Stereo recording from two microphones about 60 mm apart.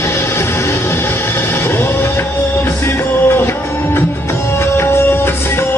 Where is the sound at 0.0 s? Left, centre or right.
Left.